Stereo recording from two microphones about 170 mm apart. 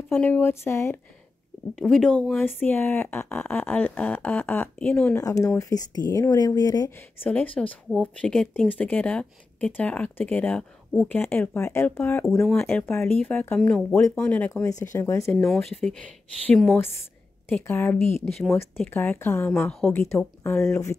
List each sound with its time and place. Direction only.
0.1 s speech: 10° left (ahead or behind)
1.8 s speech: centre (ahead or behind)
5.1 s speech: 20° left (ahead or behind)
7.2 s speech: 10° left (ahead or behind)
15.4 s speech: 5° left (ahead or behind)
17.6 s speech: 15° left (ahead or behind)
18.2 s speech: centre (ahead or behind)
18.9 s speech: 15° left (ahead or behind)